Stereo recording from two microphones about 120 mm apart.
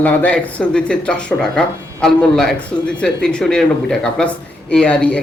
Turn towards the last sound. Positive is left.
turn(degrees=10)  # may be behind; listen again after turning